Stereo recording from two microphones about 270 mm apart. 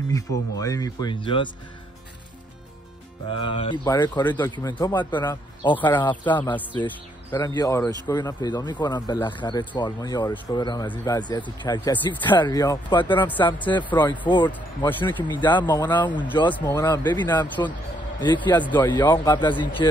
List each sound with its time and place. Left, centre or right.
0.6 s speech: centre
3.5 s speech: centre
13.8 s speech: centre